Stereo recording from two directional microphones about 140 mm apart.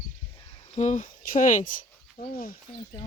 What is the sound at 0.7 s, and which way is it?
Speech, 60° left (ahead or behind).